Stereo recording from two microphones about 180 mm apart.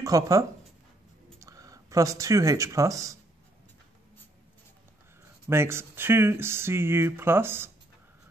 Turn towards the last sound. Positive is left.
turn(degrees=-15)  # may be behind; listen again after turning